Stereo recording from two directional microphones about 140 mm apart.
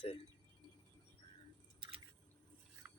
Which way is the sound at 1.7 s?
35° right (ahead or behind).